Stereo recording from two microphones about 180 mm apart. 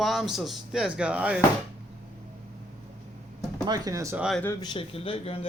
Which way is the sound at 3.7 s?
20° right (ahead or behind).